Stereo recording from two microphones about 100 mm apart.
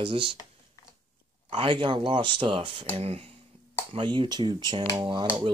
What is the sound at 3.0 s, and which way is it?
Speech, 85° right.